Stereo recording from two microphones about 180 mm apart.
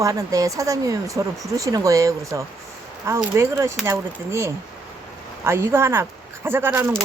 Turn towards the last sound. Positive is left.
turn(degrees=-15)  # may be behind; listen again after turning